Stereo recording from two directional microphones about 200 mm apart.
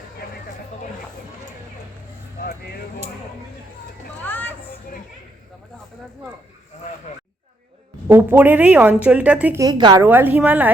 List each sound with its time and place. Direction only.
4.2 s a sound: 10° left (ahead or behind)
8.0 s a woman's voice: 10° right (ahead or behind)
9.6 s a woman's voice: 20° right (ahead or behind)
10.0 s a woman's voice: 10° right (ahead or behind)